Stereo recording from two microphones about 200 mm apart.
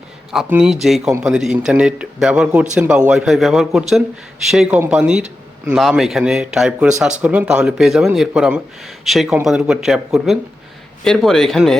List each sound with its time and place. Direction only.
0.3 s speech: 5° right (ahead or behind)